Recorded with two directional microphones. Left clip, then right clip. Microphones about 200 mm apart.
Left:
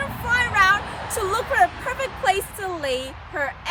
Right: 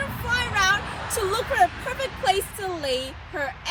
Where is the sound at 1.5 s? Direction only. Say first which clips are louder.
Left 2 dB; 5° left (ahead or behind).